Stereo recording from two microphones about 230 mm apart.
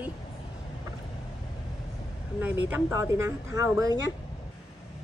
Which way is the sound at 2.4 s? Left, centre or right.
Centre.